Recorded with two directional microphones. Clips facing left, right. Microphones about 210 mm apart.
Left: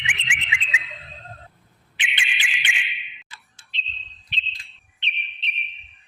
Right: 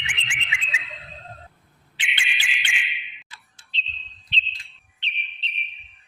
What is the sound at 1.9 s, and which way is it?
Bird, 20° left (ahead or behind).